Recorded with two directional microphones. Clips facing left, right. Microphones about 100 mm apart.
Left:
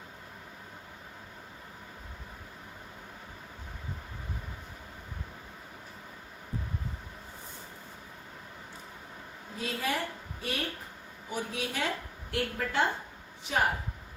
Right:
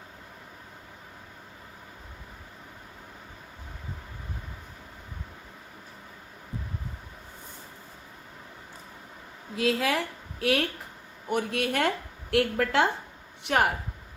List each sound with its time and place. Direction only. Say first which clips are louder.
9.6 s a woman's voice: right 7 dB; 90° right
11.3 s a woman's voice: right 8 dB; 60° right (ahead or behind); by 12.9 s 80° right
13.4 s speech: right 5 dB; 65° right (ahead or behind)